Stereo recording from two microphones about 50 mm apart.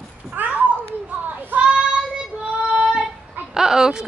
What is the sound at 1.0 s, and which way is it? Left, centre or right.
Children playing, right.